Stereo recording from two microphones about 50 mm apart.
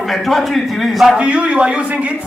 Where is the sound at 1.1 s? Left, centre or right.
Right.